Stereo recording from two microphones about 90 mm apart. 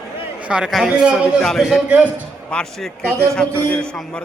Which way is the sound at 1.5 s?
Centre (ahead or behind).